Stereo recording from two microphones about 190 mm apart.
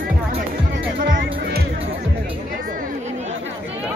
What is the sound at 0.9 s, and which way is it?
Music, 60° right (ahead or behind).